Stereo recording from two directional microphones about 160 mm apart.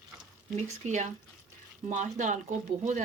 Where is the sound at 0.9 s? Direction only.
50° right (ahead or behind).